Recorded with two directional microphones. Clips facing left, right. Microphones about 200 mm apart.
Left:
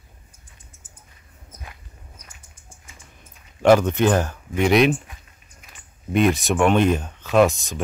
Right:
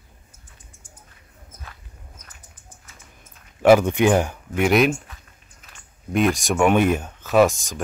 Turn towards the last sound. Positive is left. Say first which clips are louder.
# even
turn(degrees=0)  # may be behind; listen again after turning